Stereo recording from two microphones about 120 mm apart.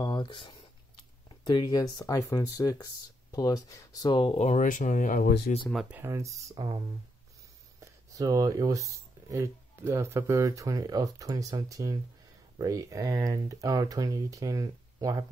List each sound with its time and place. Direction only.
0.0 s a sound: 40° left (ahead or behind)
1.3 s speech: 40° left (ahead or behind)
4.4 s speech: 80° left
5.7 s speech: 5° right (ahead or behind)
5.9 s speech: 25° right (ahead or behind)
7.8 s speech: 30° right (ahead or behind)